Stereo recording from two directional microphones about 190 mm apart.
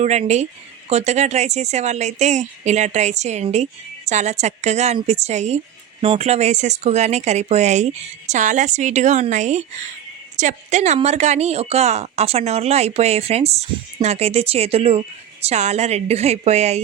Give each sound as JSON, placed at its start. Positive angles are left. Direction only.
{"t": 0.0, "sound": "speech", "side_deg": -35}